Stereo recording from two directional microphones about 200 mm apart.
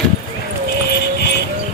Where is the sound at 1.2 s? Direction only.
55° left (ahead or behind).